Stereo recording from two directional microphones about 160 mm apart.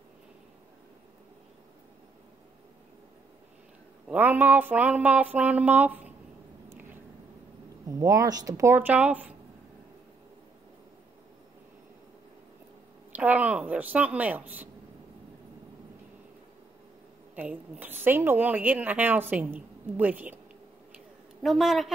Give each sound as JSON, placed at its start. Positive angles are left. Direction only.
{"t": 4.1, "sound": "a woman's voice", "side_deg": -10}
{"t": 6.7, "sound": "a sound", "side_deg": -15}
{"t": 7.9, "sound": "speech", "side_deg": -20}
{"t": 13.1, "sound": "a woman's voice", "side_deg": -10}
{"t": 17.4, "sound": "a woman's voice", "side_deg": -10}
{"t": 21.4, "sound": "a man's voice", "side_deg": 0}